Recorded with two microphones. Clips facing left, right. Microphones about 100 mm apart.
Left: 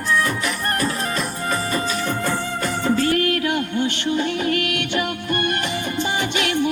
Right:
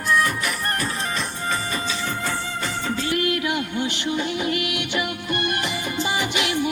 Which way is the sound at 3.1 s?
40° left (ahead or behind).